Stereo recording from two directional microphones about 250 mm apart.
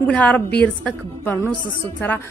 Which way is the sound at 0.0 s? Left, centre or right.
Centre.